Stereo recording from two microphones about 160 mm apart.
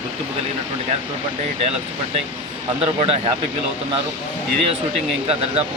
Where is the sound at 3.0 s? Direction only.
35° right (ahead or behind).